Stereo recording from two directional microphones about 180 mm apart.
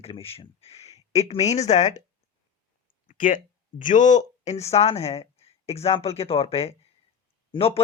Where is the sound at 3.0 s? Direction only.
45° left (ahead or behind).